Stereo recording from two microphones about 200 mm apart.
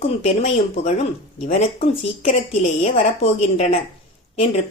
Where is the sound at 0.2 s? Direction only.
35° left (ahead or behind).